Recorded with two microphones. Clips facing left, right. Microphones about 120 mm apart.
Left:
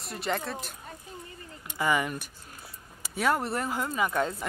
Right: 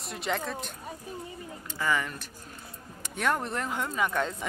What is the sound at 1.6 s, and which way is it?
Speech, 15° left (ahead or behind).